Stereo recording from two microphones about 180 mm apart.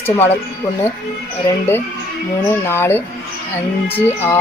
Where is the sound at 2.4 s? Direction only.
15° left (ahead or behind).